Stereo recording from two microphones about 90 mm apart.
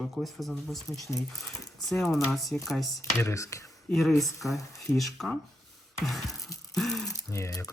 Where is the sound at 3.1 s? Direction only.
35° left (ahead or behind).